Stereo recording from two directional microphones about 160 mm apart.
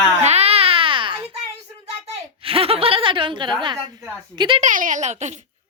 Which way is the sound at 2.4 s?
35° right (ahead or behind).